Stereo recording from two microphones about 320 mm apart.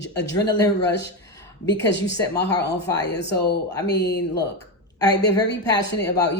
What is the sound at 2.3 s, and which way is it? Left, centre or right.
Speech, left.